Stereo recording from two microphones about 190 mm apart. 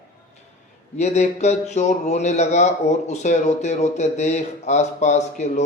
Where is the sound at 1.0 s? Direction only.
35° left (ahead or behind).